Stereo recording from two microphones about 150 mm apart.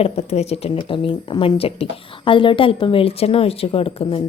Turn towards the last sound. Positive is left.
turn(degrees=40)  # may be behind; listen again after turning